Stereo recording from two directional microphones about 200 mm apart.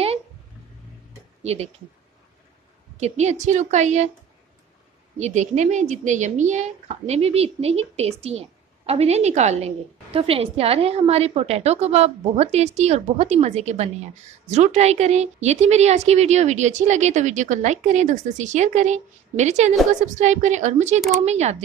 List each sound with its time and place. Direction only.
1.4 s speech: 30° right (ahead or behind)
3.0 s a woman's voice: 35° right (ahead or behind)
5.2 s a woman's voice: 35° right (ahead or behind)